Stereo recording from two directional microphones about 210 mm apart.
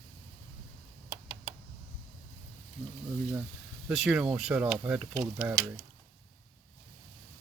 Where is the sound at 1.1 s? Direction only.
25° right (ahead or behind).